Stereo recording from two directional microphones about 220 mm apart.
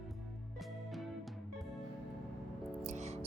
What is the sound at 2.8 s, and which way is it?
Music, 30° right (ahead or behind).